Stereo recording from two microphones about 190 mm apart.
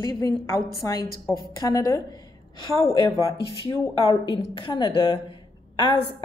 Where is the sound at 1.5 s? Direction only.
20° left (ahead or behind).